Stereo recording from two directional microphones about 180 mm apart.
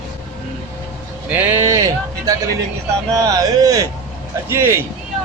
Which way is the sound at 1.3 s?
10° right (ahead or behind).